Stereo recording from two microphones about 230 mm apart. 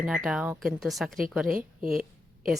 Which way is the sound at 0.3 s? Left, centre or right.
Centre.